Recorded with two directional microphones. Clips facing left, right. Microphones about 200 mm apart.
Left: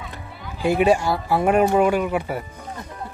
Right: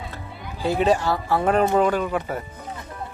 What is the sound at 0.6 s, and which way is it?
Speech, 10° left (ahead or behind).